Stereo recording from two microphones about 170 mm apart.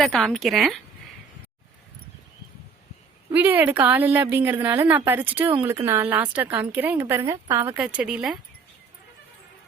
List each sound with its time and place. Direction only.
0.0 s speech: centre (ahead or behind)
3.3 s a woman's voice: 10° right (ahead or behind)